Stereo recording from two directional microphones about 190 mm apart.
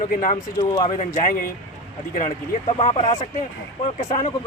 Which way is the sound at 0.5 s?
20° left (ahead or behind).